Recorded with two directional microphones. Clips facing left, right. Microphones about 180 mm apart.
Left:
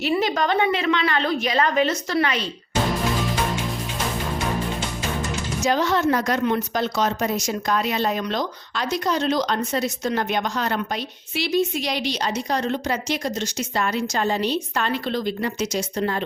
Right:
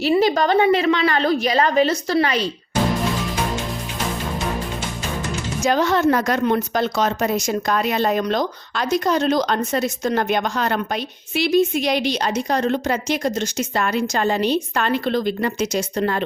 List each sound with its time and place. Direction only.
0.2 s a woman's voice: 35° right (ahead or behind)
5.6 s a woman's voice: 50° right (ahead or behind)